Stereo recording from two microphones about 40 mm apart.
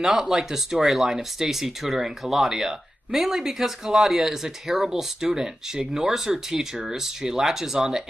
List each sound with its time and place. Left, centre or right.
0.2 s speech: centre